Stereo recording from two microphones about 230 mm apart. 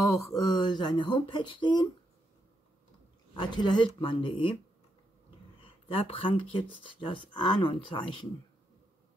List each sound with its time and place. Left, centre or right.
0.1 s speech: centre
3.3 s speech: centre
5.6 s speech: left